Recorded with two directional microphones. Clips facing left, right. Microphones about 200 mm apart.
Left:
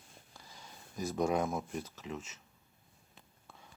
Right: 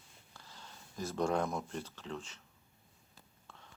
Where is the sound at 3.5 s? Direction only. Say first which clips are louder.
Left 1 dB; 10° left (ahead or behind).